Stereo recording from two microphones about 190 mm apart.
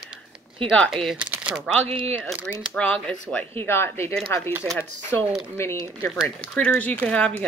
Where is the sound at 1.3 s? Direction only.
5° right (ahead or behind).